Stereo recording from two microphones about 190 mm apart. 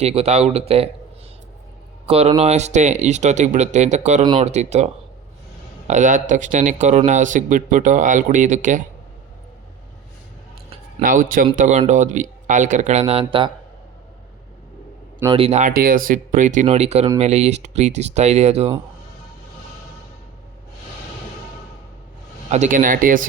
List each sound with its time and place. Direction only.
0.0 s speech: 30° right (ahead or behind)
2.0 s speech: 35° right (ahead or behind)
5.9 s speech: 40° right (ahead or behind)
11.0 s speech: 45° right (ahead or behind); by 13.5 s 30° right (ahead or behind)
15.3 s speech: 30° right (ahead or behind)
15.7 s speech: 50° right (ahead or behind)
22.5 s speech: 40° right (ahead or behind)